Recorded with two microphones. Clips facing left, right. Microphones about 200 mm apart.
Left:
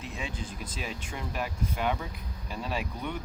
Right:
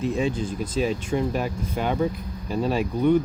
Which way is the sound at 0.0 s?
40° right (ahead or behind).